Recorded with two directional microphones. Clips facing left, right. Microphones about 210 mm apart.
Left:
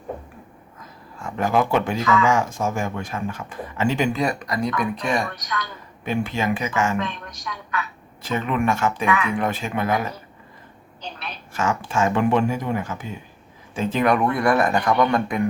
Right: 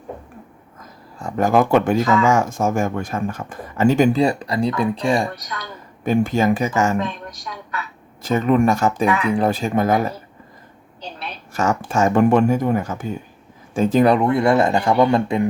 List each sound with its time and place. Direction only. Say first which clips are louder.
1.2 s speech: right 4 dB; 45° right (ahead or behind)
4.2 s speech: right 5 dB; 30° right (ahead or behind)
6.1 s speech: right 6 dB; 40° right (ahead or behind)
8.2 s speech: right 7 dB; 40° right (ahead or behind)
11.5 s speech: right 4 dB; 45° right (ahead or behind); by 15.4 s 25° right (ahead or behind)